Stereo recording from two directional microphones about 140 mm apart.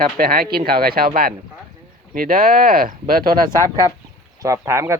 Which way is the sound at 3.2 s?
25° right (ahead or behind).